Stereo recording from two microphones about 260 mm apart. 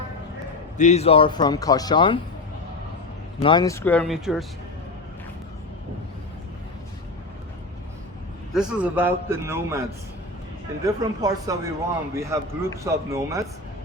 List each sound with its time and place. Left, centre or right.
0.8 s speech: left
3.4 s speech: centre
8.5 s a man's voice: centre
10.8 s a man's voice: centre